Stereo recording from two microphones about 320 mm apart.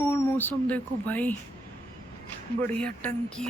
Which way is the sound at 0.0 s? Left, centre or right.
Centre.